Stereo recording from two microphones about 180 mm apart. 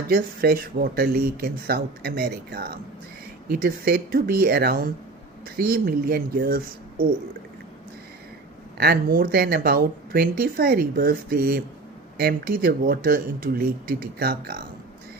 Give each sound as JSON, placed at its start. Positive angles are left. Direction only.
{"t": 0.1, "sound": "speech", "side_deg": -55}
{"t": 8.8, "sound": "speech", "side_deg": -60}